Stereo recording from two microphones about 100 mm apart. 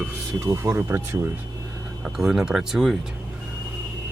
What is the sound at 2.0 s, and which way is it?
Speech, 5° right (ahead or behind).